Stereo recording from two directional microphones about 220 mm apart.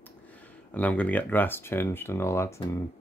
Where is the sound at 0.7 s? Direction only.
5° left (ahead or behind).